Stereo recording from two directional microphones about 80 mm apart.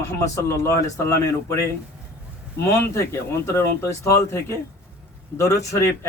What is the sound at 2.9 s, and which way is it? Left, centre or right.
Speech, left.